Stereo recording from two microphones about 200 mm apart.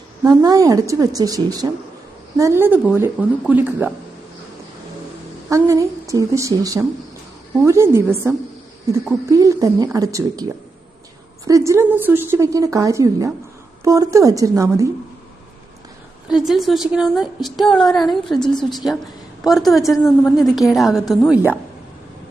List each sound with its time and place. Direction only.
0.3 s a woman's voice: 15° right (ahead or behind)
5.5 s a woman's voice: 15° right (ahead or behind)
9.3 s a woman's voice: 15° right (ahead or behind)
16.3 s a woman's voice: centre (ahead or behind)